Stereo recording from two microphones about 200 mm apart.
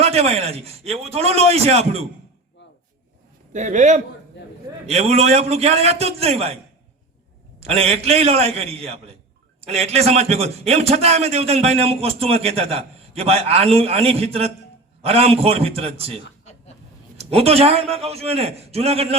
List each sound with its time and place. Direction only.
0.0 s a man's voice: 30° right (ahead or behind)
3.5 s a man's voice: 35° right (ahead or behind)
4.4 s a man's voice: 60° left (ahead or behind)
4.9 s a man's voice: 30° right (ahead or behind)
7.6 s a man's voice: 30° right (ahead or behind)